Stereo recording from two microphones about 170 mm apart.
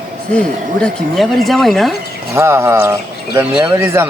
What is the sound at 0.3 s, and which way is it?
Speech, 5° left (ahead or behind).